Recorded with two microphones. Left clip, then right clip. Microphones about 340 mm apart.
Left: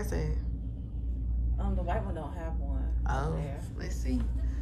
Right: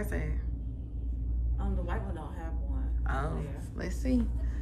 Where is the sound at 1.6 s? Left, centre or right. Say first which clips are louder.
Left 4 dB; centre.